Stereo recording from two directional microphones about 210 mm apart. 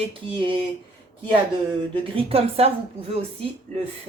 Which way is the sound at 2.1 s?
25° right (ahead or behind).